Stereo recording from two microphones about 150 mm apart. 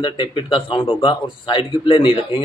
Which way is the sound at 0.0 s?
35° left (ahead or behind).